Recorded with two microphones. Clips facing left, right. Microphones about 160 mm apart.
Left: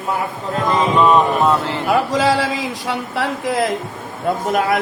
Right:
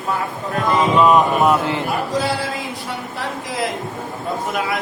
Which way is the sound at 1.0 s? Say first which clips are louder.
Even; 5° right (ahead or behind).